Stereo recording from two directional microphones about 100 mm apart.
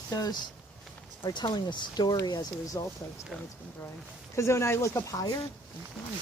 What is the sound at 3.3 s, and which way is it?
Speech, 5° right (ahead or behind).